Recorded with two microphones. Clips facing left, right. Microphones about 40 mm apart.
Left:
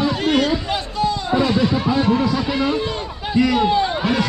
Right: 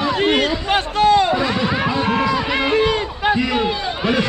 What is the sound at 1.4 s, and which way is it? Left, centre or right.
Music, right.